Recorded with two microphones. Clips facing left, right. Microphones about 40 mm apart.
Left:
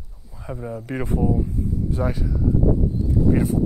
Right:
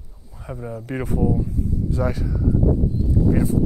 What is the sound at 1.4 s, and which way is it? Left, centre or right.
Speech, left.